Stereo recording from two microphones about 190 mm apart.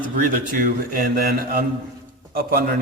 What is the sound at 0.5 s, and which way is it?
Speech, 50° right (ahead or behind).